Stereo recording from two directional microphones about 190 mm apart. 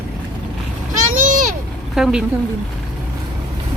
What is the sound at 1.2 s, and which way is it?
Vehicle, 45° right (ahead or behind).